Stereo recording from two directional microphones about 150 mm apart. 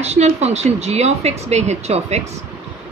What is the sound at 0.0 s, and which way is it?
Speech, 45° right (ahead or behind).